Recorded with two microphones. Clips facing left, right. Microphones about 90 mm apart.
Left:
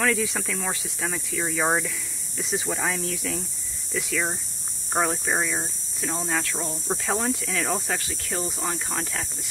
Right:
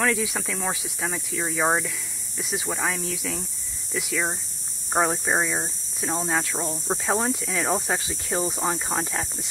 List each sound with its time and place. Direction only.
0.0 s speech: 5° right (ahead or behind)